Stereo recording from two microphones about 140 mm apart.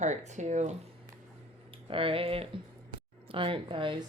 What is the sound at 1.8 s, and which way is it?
Speech, 40° right (ahead or behind).